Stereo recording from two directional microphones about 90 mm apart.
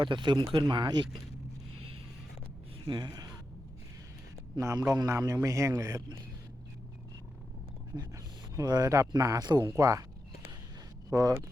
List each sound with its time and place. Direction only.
0.0 s speech: 60° right (ahead or behind)
2.8 s speech: 55° right (ahead or behind)
4.6 s a man's voice: 35° right (ahead or behind)
7.9 s speech: 5° right (ahead or behind)
8.6 s a man's voice: 45° right (ahead or behind)
11.1 s a man's voice: 40° right (ahead or behind)